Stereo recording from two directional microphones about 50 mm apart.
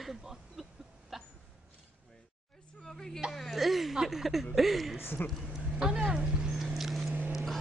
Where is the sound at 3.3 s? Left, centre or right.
Centre.